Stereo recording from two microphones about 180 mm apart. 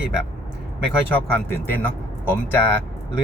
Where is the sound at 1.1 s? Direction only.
10° left (ahead or behind).